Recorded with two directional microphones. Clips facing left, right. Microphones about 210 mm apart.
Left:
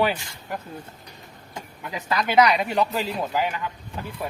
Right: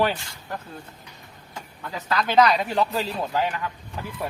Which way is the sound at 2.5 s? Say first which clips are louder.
Even; centre (ahead or behind).